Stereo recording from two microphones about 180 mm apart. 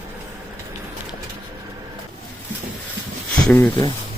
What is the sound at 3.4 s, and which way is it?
Speech, 5° left (ahead or behind).